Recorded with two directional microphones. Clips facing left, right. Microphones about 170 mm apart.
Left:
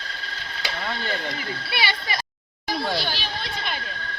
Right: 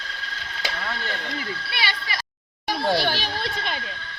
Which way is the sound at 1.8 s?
15° left (ahead or behind).